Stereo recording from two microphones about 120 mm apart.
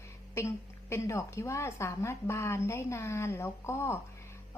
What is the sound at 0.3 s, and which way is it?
A woman's voice, 25° left (ahead or behind).